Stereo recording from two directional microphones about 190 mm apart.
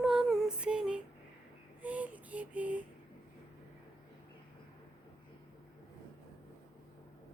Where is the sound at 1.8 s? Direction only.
10° right (ahead or behind).